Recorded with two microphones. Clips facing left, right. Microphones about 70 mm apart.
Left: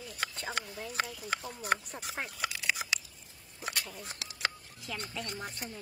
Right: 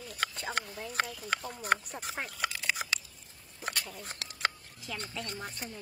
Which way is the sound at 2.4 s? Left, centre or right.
Right.